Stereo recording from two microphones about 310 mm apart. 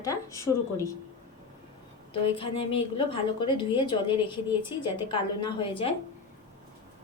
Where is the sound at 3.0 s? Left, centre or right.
Centre.